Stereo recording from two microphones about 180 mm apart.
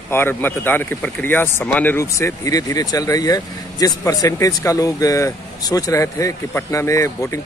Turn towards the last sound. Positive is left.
turn(degrees=15)  # may be behind; listen again after turning